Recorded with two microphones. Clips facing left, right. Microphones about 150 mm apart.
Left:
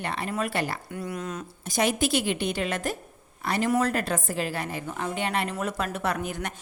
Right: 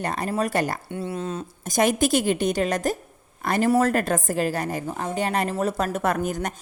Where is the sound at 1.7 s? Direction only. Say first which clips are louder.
Right 4 dB; 45° right (ahead or behind).